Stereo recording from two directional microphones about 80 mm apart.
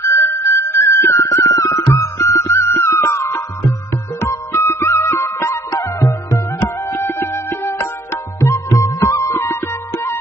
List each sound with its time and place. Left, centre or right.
0.0 s music: left